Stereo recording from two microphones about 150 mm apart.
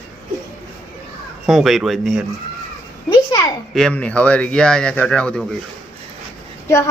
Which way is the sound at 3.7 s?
5° left (ahead or behind).